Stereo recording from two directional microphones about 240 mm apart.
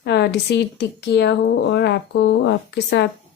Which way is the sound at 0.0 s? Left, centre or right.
Left.